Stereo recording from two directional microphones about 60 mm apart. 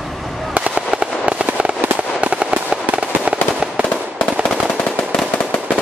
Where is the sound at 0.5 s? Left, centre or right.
Centre.